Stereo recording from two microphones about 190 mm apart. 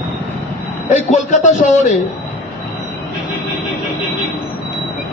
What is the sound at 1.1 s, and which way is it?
Speech, 40° left (ahead or behind).